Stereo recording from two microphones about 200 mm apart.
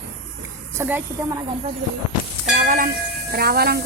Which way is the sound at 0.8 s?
10° right (ahead or behind).